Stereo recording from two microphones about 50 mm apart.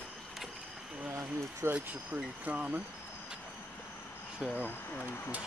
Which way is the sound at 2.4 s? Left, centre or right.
Right.